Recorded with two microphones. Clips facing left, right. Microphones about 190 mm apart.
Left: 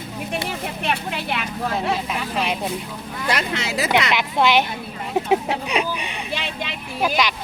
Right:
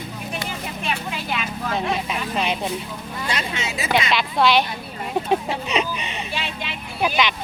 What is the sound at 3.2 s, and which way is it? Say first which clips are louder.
Speech: left 4 dB; 65° left (ahead or behind).